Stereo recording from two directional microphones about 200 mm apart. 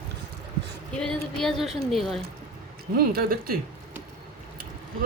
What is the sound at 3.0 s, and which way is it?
Speech, 50° right (ahead or behind).